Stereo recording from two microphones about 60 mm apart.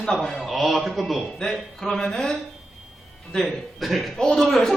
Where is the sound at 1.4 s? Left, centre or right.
Centre.